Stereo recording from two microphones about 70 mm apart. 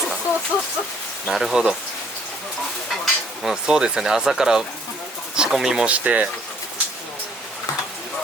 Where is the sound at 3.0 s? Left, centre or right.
Centre.